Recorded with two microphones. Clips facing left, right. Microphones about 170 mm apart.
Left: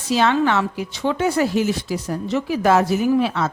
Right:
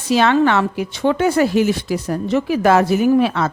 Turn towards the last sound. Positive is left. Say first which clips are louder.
# right 4 dB
turn(degrees=-60)  # may be behind; listen again after turning